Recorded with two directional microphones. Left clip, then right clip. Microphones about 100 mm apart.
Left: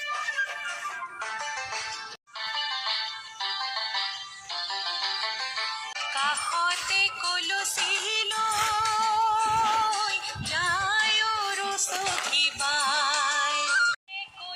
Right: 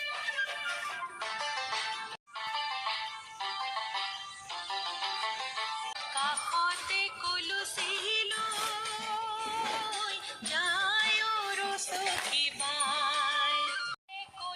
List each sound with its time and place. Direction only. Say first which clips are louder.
2.5 s music: left 5 dB; centre (ahead or behind)
6.1 s music: left 4 dB; 50° left (ahead or behind); by 9.5 s 90° left
9.9 s music: left 8 dB; 70° left (ahead or behind); by 13.9 s 90° left